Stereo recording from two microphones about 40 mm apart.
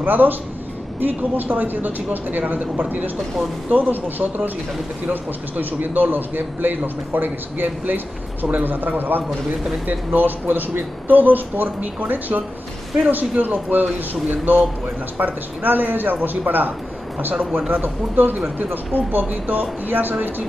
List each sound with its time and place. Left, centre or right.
0.0 s speech: right
3.7 s speech: right